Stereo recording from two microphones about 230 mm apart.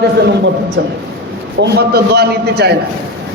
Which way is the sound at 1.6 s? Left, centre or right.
Right.